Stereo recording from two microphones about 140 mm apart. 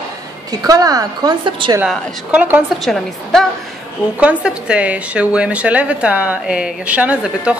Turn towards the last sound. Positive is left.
turn(degrees=-10)  # may be behind; listen again after turning